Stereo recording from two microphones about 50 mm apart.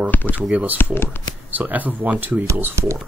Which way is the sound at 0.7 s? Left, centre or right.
Left.